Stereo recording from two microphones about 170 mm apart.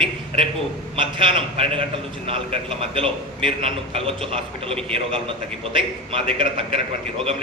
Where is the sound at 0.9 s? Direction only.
30° right (ahead or behind).